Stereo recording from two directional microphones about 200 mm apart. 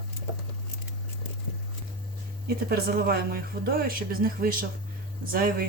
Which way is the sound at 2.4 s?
50° right (ahead or behind).